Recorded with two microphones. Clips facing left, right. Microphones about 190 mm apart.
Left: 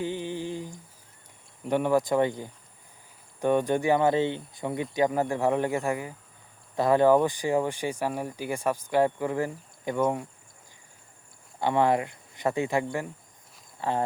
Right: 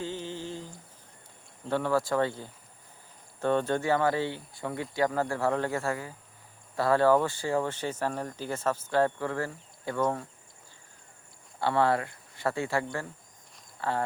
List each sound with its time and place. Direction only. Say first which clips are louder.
0.0 s a sound: left 4 dB; 15° left (ahead or behind)
1.6 s speech: left 4 dB; 15° left (ahead or behind)
11.6 s speech: left 2 dB; 15° left (ahead or behind)